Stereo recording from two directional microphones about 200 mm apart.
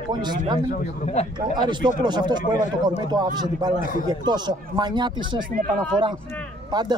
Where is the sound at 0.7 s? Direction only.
35° left (ahead or behind).